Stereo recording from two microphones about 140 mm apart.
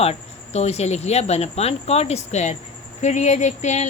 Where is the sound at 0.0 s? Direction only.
50° left (ahead or behind).